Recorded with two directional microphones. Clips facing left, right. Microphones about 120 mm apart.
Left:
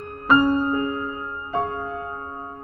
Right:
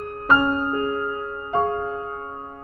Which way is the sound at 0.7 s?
30° right (ahead or behind).